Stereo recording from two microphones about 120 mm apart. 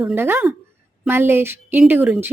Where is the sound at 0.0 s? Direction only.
20° right (ahead or behind).